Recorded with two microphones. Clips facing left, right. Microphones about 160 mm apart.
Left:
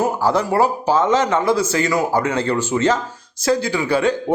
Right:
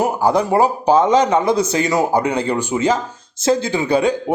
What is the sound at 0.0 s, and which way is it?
A man's voice, 15° right (ahead or behind).